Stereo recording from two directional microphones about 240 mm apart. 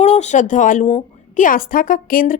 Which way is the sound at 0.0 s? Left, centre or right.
Left.